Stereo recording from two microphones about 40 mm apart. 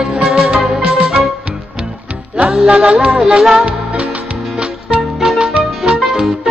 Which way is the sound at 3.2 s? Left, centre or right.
Centre.